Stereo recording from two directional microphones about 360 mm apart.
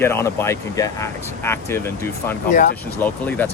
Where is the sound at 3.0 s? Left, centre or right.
Centre.